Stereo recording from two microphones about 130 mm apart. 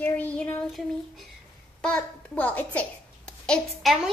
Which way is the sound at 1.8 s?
5° left (ahead or behind).